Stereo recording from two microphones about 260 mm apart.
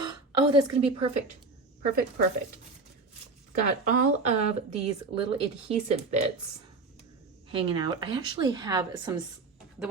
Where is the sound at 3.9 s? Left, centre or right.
Right.